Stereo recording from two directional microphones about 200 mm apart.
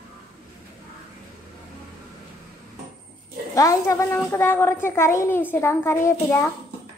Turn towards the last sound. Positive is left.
turn(degrees=15)  # may be behind; listen again after turning